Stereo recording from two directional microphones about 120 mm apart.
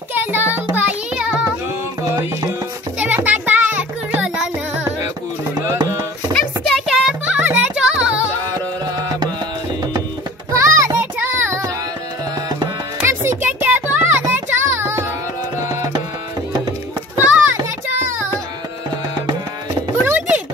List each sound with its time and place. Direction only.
0.1 s child singing: 15° right (ahead or behind)
3.0 s music: 15° right (ahead or behind)
5.7 s a sound: 25° right (ahead or behind)
6.9 s music: 5° right (ahead or behind)
10.5 s music: 25° right (ahead or behind)
11.0 s child singing: 15° right (ahead or behind)
13.0 s music: 20° right (ahead or behind)
17.2 s children playing: 15° right (ahead or behind)
17.8 s music: 20° right (ahead or behind)
20.1 s chopping: 10° right (ahead or behind)